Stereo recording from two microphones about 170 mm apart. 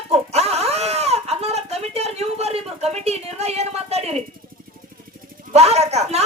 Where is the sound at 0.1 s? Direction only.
40° right (ahead or behind).